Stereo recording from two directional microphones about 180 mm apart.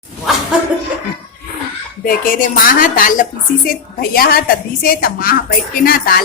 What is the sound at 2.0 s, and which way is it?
A woman's voice, 50° left (ahead or behind).